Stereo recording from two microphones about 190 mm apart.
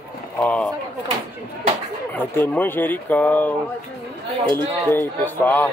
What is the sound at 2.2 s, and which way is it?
Speech, 10° left (ahead or behind).